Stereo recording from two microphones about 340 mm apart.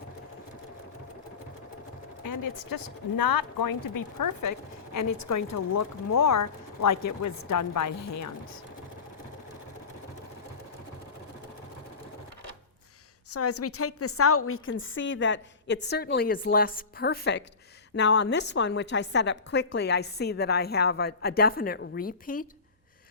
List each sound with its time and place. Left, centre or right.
2.2 s speech: left
13.3 s a woman's voice: left